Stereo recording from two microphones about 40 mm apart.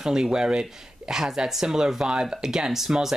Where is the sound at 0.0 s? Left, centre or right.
Centre.